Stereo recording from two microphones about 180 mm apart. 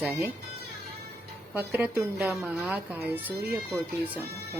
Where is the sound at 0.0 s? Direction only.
15° right (ahead or behind).